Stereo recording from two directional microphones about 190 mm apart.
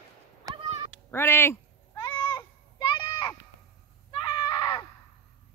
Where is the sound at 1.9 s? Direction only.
25° left (ahead or behind).